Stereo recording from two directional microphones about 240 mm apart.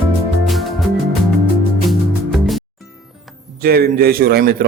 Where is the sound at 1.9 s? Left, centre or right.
Centre.